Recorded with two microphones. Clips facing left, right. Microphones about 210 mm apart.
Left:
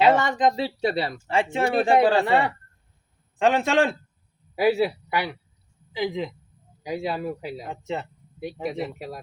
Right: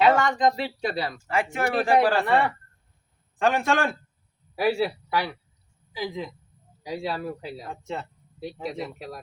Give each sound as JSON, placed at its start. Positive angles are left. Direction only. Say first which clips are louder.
{"t": 0.0, "sound": "speech", "louder": "left 1 dB", "side_deg": 20}